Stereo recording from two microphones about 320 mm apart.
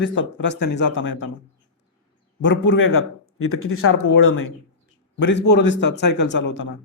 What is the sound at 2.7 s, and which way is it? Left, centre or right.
Speech, left.